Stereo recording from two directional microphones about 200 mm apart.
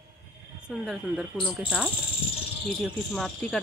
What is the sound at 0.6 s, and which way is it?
Speech, 5° right (ahead or behind).